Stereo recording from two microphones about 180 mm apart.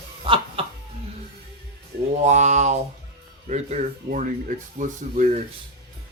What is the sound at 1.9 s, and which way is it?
Mantra, 70° right (ahead or behind).